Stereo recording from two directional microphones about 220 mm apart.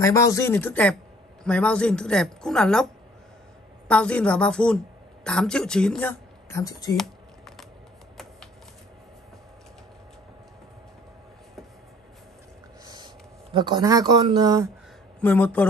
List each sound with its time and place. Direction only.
0.0 s a woman's voice: 15° left (ahead or behind)
7.0 s typing: centre (ahead or behind)
12.8 s speech: 20° right (ahead or behind)
15.1 s speech: 10° left (ahead or behind)